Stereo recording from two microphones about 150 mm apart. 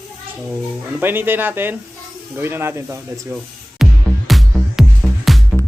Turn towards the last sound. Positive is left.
turn(degrees=0)  # may be behind; listen again after turning